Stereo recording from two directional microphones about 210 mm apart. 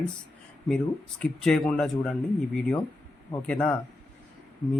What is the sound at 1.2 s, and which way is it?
Speech, 5° left (ahead or behind).